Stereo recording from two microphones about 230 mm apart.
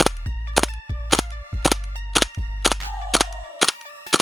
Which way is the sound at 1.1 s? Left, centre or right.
Centre.